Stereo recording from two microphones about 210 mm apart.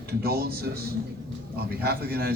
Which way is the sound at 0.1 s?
45° right (ahead or behind).